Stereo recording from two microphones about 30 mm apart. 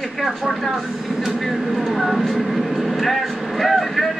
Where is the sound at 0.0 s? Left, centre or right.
Centre.